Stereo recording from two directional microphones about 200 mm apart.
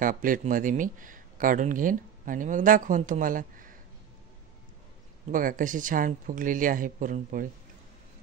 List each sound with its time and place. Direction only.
0.0 s speech: 45° right (ahead or behind)
5.3 s speech: 40° right (ahead or behind)